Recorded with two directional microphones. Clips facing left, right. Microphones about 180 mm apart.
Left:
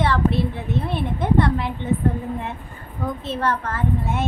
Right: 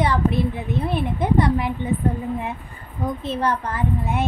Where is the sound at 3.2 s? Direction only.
15° right (ahead or behind).